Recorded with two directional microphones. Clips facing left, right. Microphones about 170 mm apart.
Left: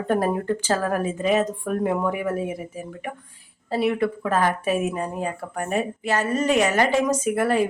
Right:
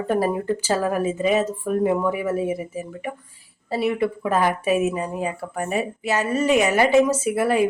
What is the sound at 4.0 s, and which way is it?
A woman's voice, 10° right (ahead or behind).